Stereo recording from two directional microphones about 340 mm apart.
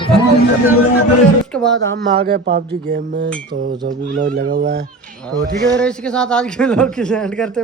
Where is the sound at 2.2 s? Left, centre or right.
Right.